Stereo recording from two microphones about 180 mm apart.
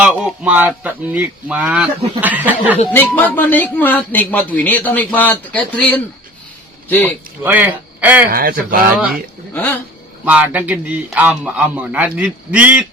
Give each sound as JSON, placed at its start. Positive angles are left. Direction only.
{"t": 0.0, "sound": "a man's voice", "side_deg": -5}
{"t": 2.9, "sound": "speech", "side_deg": 10}
{"t": 7.4, "sound": "a man's voice", "side_deg": -10}
{"t": 8.3, "sound": "speech", "side_deg": -55}
{"t": 10.2, "sound": "a man's voice", "side_deg": -10}